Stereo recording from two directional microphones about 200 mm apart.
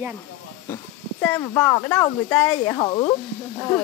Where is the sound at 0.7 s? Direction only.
10° left (ahead or behind).